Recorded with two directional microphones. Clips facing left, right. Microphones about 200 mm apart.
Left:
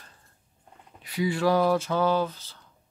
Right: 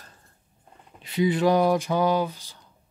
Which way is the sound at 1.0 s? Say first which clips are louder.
Right 3 dB; 20° right (ahead or behind).